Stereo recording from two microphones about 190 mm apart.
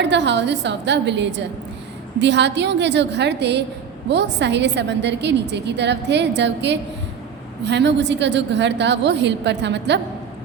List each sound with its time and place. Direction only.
0.0 s a woman's voice: 65° right (ahead or behind)